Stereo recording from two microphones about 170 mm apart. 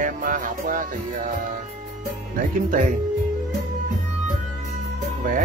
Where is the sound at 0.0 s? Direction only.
50° right (ahead or behind).